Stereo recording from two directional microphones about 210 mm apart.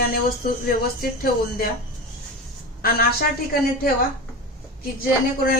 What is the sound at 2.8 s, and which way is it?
Speech, 45° left (ahead or behind).